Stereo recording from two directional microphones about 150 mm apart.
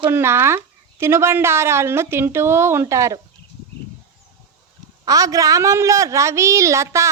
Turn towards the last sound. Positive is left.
turn(degrees=-20)  # may be behind; listen again after turning